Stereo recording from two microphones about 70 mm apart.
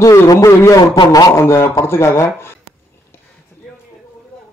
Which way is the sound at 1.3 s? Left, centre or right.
Left.